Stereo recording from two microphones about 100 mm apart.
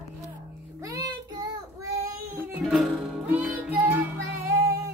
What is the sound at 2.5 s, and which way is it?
Music, 5° right (ahead or behind).